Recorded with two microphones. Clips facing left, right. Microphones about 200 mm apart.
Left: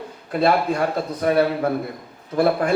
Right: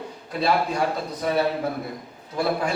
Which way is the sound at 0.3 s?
55° left (ahead or behind).